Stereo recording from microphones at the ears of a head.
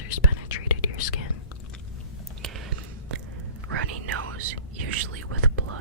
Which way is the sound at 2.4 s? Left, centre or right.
Right.